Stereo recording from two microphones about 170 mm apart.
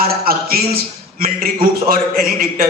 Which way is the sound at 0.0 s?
60° right (ahead or behind).